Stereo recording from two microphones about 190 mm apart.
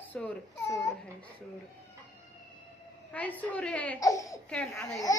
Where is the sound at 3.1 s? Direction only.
10° left (ahead or behind).